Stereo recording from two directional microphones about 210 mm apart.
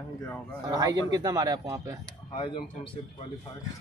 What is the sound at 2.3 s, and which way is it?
Speech, 25° left (ahead or behind).